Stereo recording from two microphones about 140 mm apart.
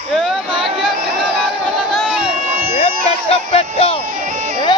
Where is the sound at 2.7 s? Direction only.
45° left (ahead or behind).